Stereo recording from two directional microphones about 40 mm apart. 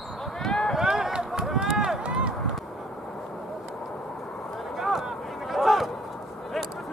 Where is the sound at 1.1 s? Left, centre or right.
Centre.